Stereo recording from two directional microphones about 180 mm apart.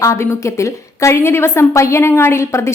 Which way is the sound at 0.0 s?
15° left (ahead or behind).